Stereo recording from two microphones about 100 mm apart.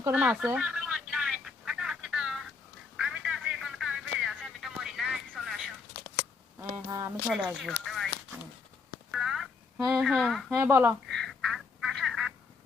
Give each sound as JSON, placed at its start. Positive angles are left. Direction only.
{"t": 0.1, "sound": "speech", "side_deg": -15}
{"t": 0.4, "sound": "telephone", "side_deg": -10}
{"t": 3.0, "sound": "a sound", "side_deg": -5}
{"t": 6.7, "sound": "speech", "side_deg": -35}
{"t": 7.3, "sound": "speech", "side_deg": -10}
{"t": 9.1, "sound": "a sound", "side_deg": -5}
{"t": 9.7, "sound": "speech", "side_deg": -25}
{"t": 10.0, "sound": "speech", "side_deg": 0}
{"t": 10.5, "sound": "speech", "side_deg": -25}
{"t": 11.1, "sound": "duck", "side_deg": 0}